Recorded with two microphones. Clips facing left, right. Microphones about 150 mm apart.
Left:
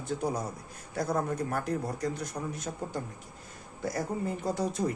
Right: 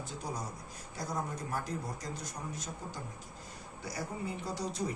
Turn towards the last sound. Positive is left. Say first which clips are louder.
# left 6 dB
turn(degrees=55)  # may be behind; listen again after turning